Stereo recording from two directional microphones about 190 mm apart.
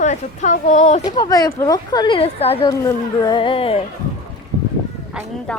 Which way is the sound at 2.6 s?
20° left (ahead or behind).